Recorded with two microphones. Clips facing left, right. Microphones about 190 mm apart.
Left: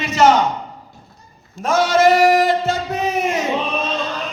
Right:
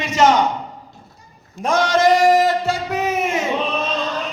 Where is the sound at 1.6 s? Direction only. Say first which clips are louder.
Left 1 dB; 5° left (ahead or behind).